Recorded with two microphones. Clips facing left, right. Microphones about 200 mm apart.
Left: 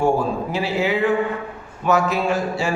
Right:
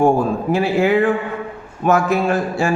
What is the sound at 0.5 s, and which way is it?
A man's voice, 50° right (ahead or behind).